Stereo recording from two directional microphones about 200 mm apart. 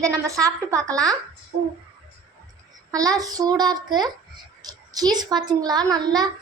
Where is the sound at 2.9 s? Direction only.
20° right (ahead or behind).